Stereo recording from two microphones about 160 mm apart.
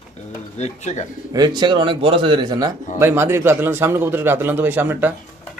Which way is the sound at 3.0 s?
15° right (ahead or behind).